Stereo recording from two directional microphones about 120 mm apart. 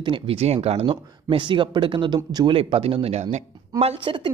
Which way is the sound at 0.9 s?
45° right (ahead or behind).